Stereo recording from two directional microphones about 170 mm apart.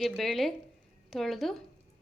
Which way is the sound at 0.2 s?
Centre (ahead or behind).